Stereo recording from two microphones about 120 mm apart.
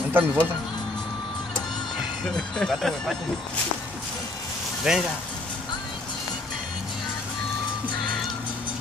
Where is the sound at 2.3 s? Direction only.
5° left (ahead or behind).